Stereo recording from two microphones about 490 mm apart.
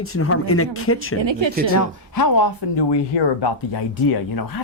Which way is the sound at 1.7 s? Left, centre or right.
Left.